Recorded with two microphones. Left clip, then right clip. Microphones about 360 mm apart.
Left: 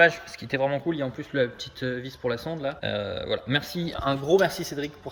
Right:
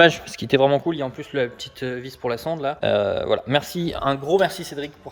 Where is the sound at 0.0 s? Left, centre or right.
Right.